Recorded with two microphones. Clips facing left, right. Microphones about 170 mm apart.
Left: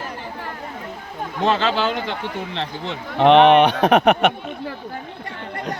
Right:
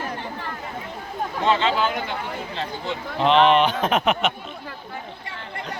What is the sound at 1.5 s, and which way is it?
Speech, 70° left (ahead or behind).